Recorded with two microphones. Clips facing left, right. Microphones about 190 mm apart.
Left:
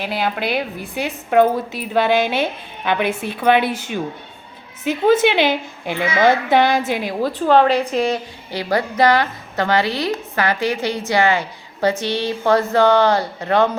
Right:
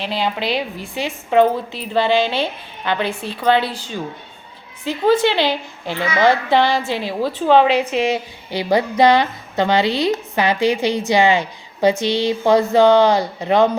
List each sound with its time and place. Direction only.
0.4 s a woman's voice: 55° left (ahead or behind)
1.0 s a woman's voice: 5° left (ahead or behind)
7.2 s a woman's voice: 10° right (ahead or behind)